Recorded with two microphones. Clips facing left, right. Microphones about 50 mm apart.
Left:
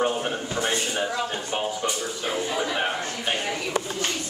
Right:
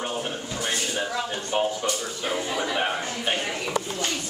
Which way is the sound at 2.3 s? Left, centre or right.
Centre.